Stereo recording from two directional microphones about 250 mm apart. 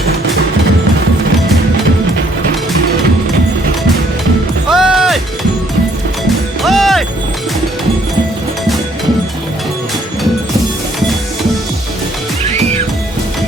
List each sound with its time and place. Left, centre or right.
4.7 s music: centre
6.6 s music: centre